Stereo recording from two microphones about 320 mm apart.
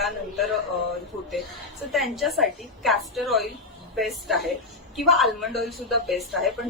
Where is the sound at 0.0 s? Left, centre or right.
Centre.